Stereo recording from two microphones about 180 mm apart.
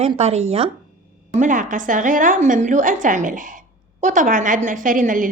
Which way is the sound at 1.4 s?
45° right (ahead or behind).